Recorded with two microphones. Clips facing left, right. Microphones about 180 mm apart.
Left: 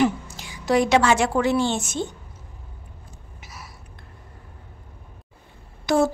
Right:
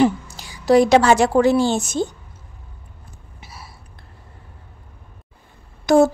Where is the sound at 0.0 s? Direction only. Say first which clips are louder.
Right 4 dB; 35° right (ahead or behind).